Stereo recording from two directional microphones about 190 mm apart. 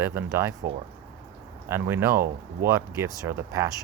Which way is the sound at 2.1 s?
50° right (ahead or behind).